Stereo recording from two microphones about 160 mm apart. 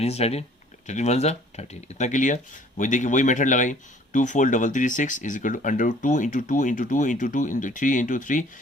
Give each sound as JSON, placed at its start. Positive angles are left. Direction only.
{"t": 0.0, "sound": "speech", "side_deg": 40}